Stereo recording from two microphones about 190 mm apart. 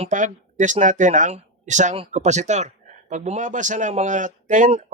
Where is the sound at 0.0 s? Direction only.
40° right (ahead or behind).